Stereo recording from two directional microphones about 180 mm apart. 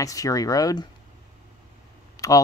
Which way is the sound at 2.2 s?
20° left (ahead or behind).